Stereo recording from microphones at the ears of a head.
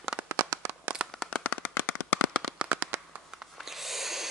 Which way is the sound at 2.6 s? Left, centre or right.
Right.